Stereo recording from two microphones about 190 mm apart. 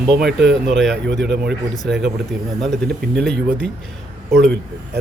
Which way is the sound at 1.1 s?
65° right (ahead or behind).